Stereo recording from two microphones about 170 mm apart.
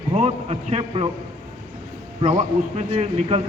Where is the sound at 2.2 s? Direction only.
40° right (ahead or behind).